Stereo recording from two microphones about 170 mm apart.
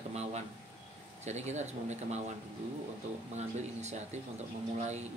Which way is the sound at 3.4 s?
40° right (ahead or behind).